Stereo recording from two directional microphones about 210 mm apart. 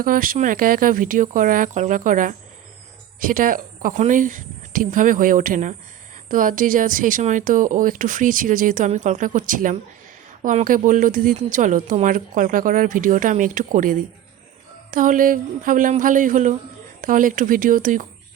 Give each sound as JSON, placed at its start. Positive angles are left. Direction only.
{"t": 0.0, "sound": "speech", "side_deg": -40}